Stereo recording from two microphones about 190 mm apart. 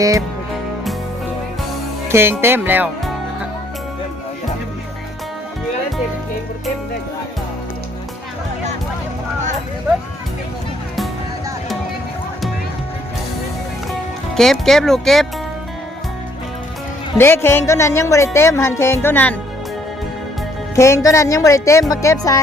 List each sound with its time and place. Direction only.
2.0 s speech: 10° right (ahead or behind)
14.3 s speech: centre (ahead or behind)
17.2 s speech: 10° left (ahead or behind)
20.7 s speech: 15° left (ahead or behind)